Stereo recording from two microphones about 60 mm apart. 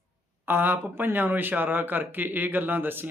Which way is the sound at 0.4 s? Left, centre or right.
Right.